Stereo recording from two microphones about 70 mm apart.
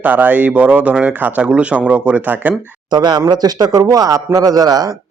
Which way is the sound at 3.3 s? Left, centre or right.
Right.